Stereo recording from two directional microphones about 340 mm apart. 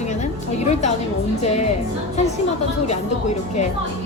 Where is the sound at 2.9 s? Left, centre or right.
Centre.